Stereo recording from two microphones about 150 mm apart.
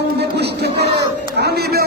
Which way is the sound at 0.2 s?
90° right.